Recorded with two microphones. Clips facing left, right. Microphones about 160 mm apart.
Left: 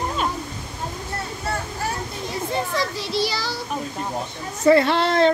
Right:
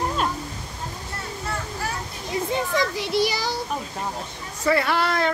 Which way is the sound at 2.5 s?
15° right (ahead or behind).